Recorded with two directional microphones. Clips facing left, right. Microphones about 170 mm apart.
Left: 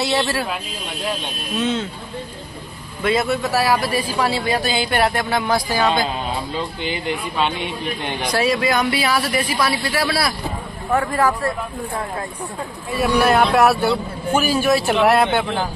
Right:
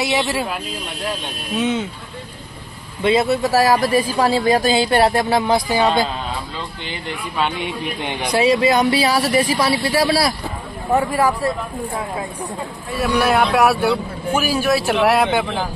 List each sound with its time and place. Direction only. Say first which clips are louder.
0.0 s speech: even; 15° right (ahead or behind)
1.6 s speech: right 1 dB; 15° right (ahead or behind)
3.0 s speech: right 3 dB; 25° right (ahead or behind)
7.3 s a man's voice: right 4 dB; 10° right (ahead or behind); by 10.3 s 30° right (ahead or behind)
10.9 s speech: right 1 dB; 15° right (ahead or behind)
12.9 s a man's voice: left 1 dB; centre (ahead or behind)